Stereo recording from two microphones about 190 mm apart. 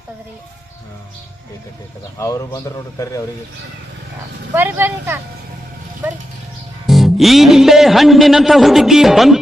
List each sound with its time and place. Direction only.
2.1 s a man's voice: 15° left (ahead or behind)
4.5 s speech: 10° right (ahead or behind)
6.8 s a man's voice: centre (ahead or behind)